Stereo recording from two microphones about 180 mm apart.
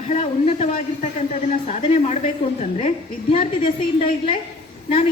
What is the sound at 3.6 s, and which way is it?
Speech, 30° left (ahead or behind).